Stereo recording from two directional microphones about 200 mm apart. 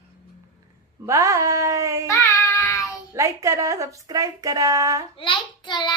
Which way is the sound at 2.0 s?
15° left (ahead or behind).